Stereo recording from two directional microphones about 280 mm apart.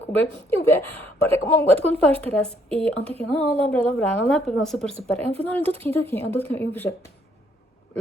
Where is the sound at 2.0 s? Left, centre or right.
Centre.